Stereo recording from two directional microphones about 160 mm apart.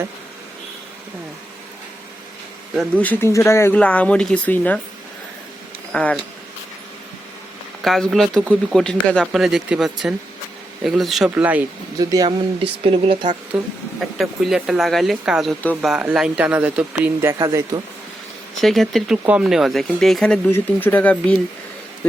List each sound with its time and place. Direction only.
2.9 s speech: 10° left (ahead or behind)
5.9 s speech: 5° left (ahead or behind)
7.8 s speech: centre (ahead or behind)
11.9 s speech: 25° right (ahead or behind)
12.8 s speech: 35° right (ahead or behind)
13.5 s speech: 5° right (ahead or behind)
18.6 s speech: centre (ahead or behind)